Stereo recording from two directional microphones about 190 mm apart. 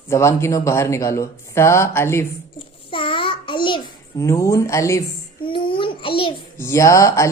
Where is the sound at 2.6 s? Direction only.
25° left (ahead or behind).